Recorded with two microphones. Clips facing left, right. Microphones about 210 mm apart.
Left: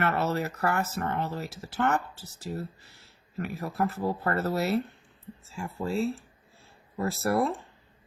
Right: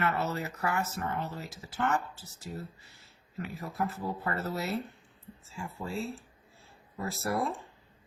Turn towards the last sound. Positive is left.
turn(degrees=65)  # may be behind; listen again after turning